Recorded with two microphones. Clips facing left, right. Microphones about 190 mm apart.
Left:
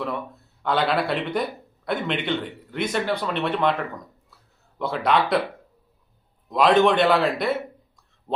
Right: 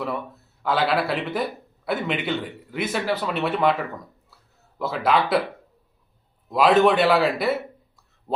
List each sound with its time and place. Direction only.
0.6 s a man's voice: 5° right (ahead or behind)
6.5 s a man's voice: 5° right (ahead or behind)